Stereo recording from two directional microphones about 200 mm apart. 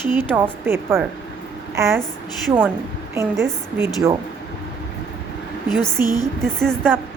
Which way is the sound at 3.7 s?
15° right (ahead or behind).